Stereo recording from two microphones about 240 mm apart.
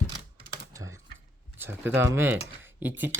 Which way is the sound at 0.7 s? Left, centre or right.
Centre.